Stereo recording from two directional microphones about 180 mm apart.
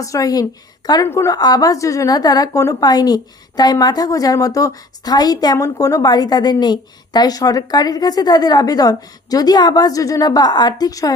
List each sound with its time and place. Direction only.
0.0 s a woman's voice: 20° left (ahead or behind)